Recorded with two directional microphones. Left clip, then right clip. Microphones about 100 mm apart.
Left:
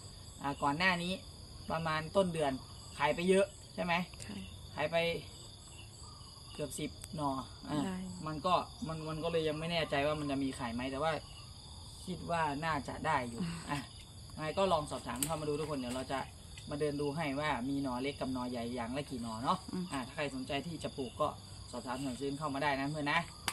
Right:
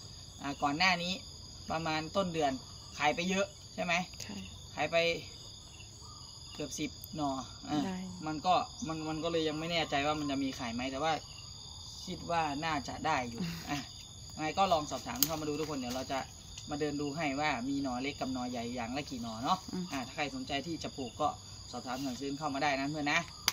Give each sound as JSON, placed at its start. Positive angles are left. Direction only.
{"t": 0.4, "sound": "speech", "side_deg": 20}
{"t": 6.6, "sound": "speech", "side_deg": 20}
{"t": 12.3, "sound": "speech", "side_deg": 10}
{"t": 13.4, "sound": "speech", "side_deg": -10}
{"t": 14.3, "sound": "speech", "side_deg": 25}